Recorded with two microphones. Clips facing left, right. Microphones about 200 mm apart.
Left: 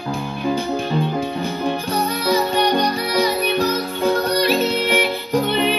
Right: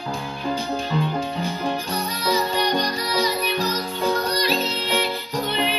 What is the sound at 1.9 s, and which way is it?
Music, 55° left (ahead or behind).